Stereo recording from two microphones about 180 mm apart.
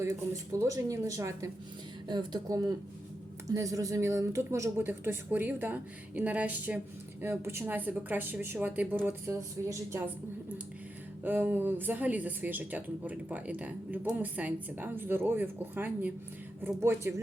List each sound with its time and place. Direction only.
0.0 s speech: 15° right (ahead or behind)
11.2 s speech: 10° right (ahead or behind)